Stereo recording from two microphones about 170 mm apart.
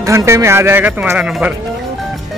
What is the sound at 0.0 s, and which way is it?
Speech, 15° right (ahead or behind).